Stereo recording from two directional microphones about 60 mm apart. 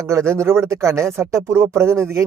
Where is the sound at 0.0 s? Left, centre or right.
Right.